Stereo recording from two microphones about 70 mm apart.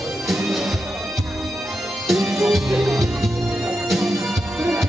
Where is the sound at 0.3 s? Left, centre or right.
Centre.